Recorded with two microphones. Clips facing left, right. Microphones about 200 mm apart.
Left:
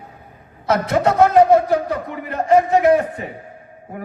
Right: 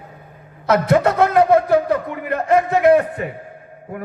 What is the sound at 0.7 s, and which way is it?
A man's voice, 55° right (ahead or behind).